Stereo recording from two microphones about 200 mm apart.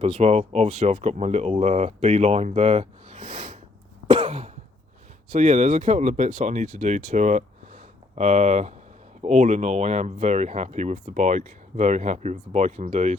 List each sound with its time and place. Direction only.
0.0 s speech: 30° right (ahead or behind)
4.1 s cough: 30° right (ahead or behind)
5.3 s speech: 35° right (ahead or behind)